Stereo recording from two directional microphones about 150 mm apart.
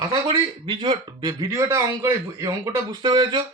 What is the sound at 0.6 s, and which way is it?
A man's voice, 30° right (ahead or behind).